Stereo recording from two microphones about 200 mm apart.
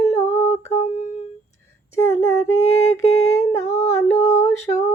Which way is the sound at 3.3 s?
15° left (ahead or behind).